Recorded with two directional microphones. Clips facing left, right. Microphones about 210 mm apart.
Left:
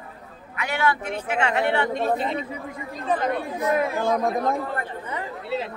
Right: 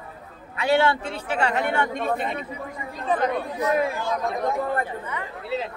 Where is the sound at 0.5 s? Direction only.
30° right (ahead or behind); by 1.8 s 45° right (ahead or behind).